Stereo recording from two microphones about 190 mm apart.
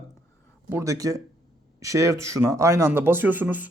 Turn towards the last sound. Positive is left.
turn(degrees=-10)  # may be behind; listen again after turning